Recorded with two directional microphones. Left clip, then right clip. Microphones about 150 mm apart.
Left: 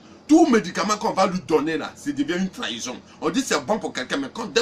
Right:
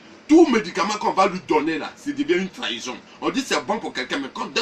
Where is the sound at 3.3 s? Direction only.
20° left (ahead or behind).